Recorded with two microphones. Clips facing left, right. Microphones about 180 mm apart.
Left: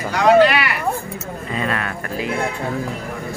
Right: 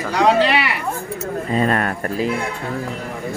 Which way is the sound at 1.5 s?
40° right (ahead or behind).